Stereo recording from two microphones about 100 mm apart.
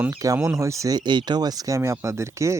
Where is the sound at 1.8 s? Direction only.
30° right (ahead or behind).